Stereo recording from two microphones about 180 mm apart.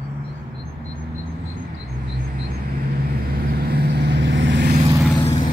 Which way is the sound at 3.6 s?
65° right (ahead or behind).